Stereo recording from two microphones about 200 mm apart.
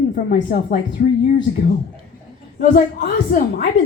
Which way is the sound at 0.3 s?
50° left (ahead or behind).